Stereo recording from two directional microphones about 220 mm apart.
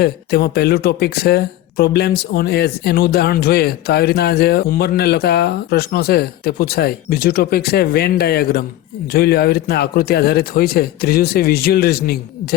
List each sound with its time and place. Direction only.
0.0 s speech: 45° left (ahead or behind)